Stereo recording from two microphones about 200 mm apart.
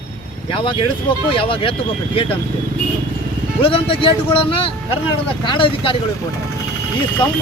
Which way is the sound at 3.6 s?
25° left (ahead or behind).